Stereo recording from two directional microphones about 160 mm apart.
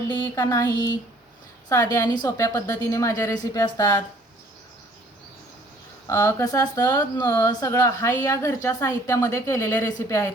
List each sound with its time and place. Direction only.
0.1 s speech: 25° left (ahead or behind)
6.1 s speech: 20° left (ahead or behind)